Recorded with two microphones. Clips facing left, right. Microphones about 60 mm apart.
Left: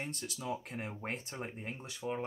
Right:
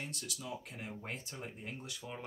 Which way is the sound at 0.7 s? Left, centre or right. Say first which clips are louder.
Left 4 dB; left.